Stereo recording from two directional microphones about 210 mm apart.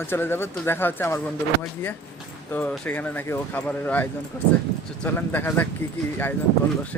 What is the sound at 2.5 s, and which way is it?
Speech, 10° left (ahead or behind).